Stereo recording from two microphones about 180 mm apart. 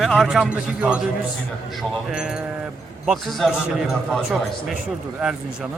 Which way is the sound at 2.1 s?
5° right (ahead or behind).